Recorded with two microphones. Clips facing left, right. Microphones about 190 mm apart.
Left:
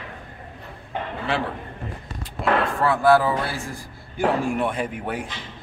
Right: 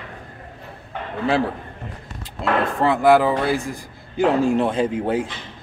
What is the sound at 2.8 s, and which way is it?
A man's voice, 20° right (ahead or behind).